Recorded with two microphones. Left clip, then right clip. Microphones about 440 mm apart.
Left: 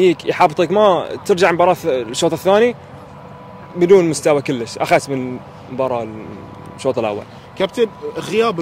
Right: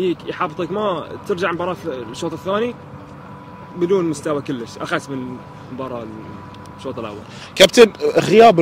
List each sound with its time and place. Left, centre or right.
0.0 s speech: left
3.8 s speech: left
6.8 s speech: left
7.5 s speech: right
8.3 s speech: right